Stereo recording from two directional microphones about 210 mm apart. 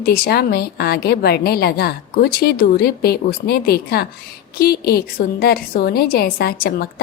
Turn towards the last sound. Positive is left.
turn(degrees=50)  # may be behind; listen again after turning